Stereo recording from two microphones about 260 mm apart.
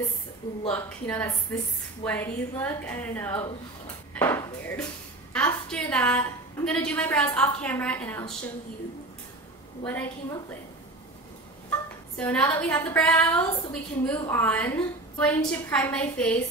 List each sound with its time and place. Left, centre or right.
0.7 s a woman's voice: centre
9.8 s speech: centre
11.7 s a woman's voice: centre